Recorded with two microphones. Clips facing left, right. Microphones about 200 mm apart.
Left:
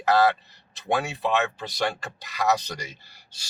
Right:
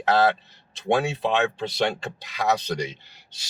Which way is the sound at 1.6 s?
25° right (ahead or behind).